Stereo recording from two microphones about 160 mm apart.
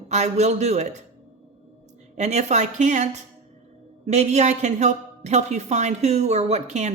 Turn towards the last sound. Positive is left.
turn(degrees=-45)  # may be behind; listen again after turning